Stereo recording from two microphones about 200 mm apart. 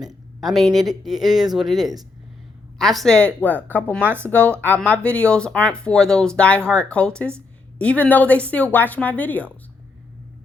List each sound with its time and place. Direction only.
0.0 s a sound: 20° right (ahead or behind)
0.4 s speech: centre (ahead or behind)
4.0 s speech: 10° right (ahead or behind)
4.3 s a woman's voice: 5° left (ahead or behind)